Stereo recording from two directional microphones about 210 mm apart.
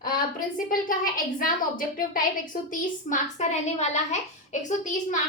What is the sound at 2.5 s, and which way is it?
A woman's voice, 40° left (ahead or behind).